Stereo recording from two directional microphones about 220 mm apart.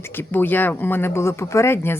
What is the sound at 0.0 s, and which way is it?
Speech, 10° left (ahead or behind).